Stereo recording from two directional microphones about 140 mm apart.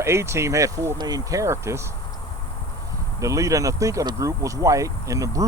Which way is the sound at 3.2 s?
25° right (ahead or behind).